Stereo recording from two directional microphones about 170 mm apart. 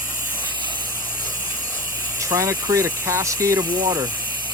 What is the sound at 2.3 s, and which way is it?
Speech, 20° right (ahead or behind).